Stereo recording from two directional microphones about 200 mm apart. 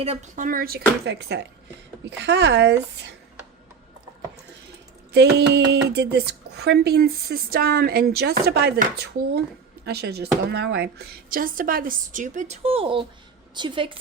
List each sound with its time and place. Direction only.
0.0 s speech: 35° right (ahead or behind); by 3.2 s 60° right (ahead or behind)
5.1 s a woman's voice: 60° right (ahead or behind); by 14.0 s 25° right (ahead or behind)